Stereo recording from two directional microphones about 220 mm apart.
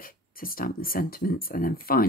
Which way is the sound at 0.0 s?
40° left (ahead or behind).